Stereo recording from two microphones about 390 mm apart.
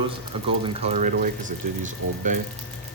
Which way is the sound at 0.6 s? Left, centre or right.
Centre.